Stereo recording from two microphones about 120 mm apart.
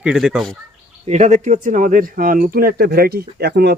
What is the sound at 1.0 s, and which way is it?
Speech, 70° right (ahead or behind).